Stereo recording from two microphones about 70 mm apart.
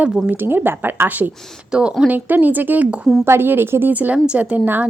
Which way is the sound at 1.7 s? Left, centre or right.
Centre.